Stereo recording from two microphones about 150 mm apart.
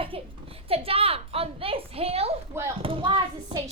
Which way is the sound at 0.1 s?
40° right (ahead or behind).